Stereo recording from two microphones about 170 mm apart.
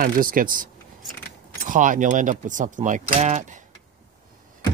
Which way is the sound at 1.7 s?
50° right (ahead or behind).